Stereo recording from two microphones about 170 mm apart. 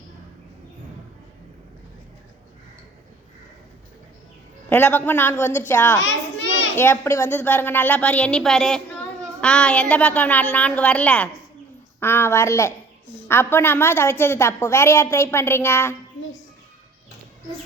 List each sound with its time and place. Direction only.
4.7 s a woman's voice: 10° left (ahead or behind)
6.4 s children playing: 90° left
6.7 s a woman's voice: 15° left (ahead or behind)